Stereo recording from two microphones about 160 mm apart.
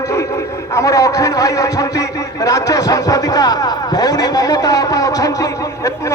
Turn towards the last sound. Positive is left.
turn(degrees=20)  # may be behind; listen again after turning